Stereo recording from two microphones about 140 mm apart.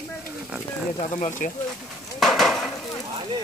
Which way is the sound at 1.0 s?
60° left (ahead or behind).